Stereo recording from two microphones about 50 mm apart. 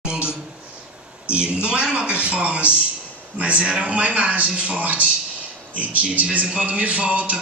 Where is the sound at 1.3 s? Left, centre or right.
Right.